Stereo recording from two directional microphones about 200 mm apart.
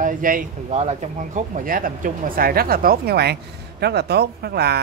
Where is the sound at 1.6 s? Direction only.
45° right (ahead or behind).